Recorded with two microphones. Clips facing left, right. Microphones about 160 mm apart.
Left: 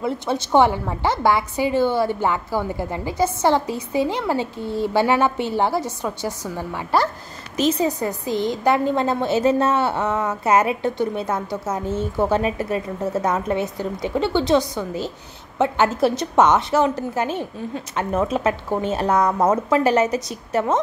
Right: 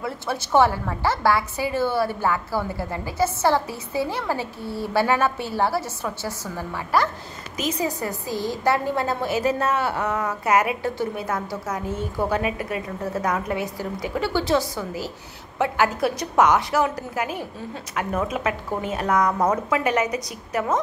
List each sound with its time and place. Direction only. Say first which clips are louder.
0.0 s a woman's voice: left 5 dB; 20° left (ahead or behind)
7.5 s a woman's voice: left 6 dB; 25° left (ahead or behind)